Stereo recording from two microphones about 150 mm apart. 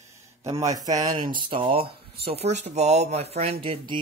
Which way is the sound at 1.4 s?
35° right (ahead or behind).